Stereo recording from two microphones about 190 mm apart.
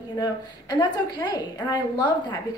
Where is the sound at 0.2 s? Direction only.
20° left (ahead or behind).